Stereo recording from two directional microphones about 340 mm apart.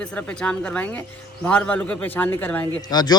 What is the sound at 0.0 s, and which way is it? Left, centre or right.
A man's voice, centre.